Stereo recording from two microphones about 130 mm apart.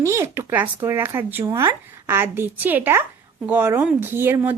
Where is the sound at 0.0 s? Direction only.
20° right (ahead or behind).